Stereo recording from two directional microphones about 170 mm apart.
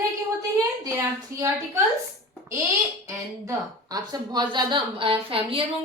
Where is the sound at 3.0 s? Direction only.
20° right (ahead or behind).